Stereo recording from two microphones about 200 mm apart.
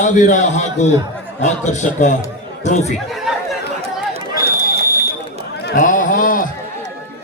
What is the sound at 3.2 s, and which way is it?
Chatter, centre (ahead or behind).